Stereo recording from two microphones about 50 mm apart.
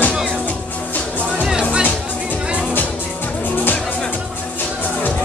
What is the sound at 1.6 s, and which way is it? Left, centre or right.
Music, right.